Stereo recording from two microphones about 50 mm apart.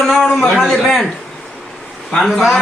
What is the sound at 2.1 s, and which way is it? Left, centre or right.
Speech, centre.